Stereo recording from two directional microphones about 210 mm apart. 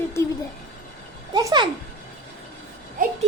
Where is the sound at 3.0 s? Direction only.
40° right (ahead or behind).